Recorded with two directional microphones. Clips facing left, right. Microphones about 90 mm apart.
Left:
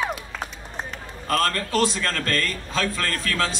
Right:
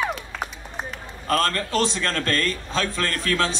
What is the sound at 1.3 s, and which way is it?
A man's voice, 35° right (ahead or behind).